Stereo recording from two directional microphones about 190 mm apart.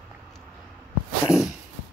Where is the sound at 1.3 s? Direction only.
5° right (ahead or behind).